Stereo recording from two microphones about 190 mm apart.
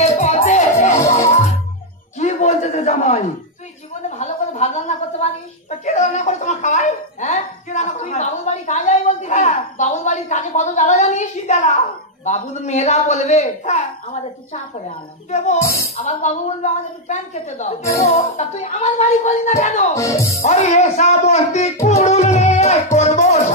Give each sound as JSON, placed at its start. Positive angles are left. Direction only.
{"t": 0.0, "sound": "music", "side_deg": 35}
{"t": 2.1, "sound": "a sound", "side_deg": 35}
{"t": 5.9, "sound": "chuckle", "side_deg": 40}
{"t": 12.3, "sound": "speech", "side_deg": 40}
{"t": 15.6, "sound": "speech", "side_deg": 15}
{"t": 16.0, "sound": "speech", "side_deg": 35}
{"t": 19.9, "sound": "speech", "side_deg": 15}
{"t": 20.3, "sound": "speech", "side_deg": 35}